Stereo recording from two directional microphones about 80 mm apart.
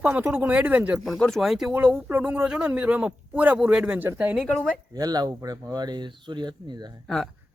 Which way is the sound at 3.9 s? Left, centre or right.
Right.